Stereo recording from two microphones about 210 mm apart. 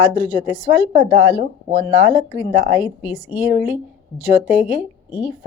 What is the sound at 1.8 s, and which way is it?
A woman's voice, 15° right (ahead or behind).